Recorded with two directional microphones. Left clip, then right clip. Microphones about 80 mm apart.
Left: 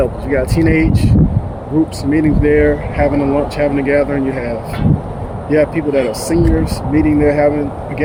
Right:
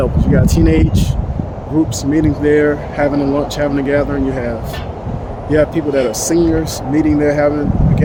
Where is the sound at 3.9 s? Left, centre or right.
Right.